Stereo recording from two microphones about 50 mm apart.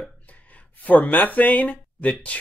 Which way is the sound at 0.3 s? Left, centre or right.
Left.